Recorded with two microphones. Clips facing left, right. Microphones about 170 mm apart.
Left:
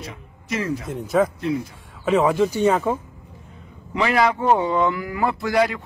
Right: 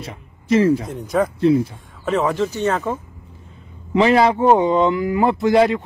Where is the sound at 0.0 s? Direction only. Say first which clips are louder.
Right 2 dB; 30° right (ahead or behind).